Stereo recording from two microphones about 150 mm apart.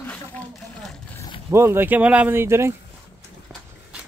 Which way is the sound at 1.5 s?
15° right (ahead or behind).